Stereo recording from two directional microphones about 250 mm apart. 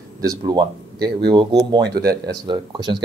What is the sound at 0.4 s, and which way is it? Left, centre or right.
Speech, centre.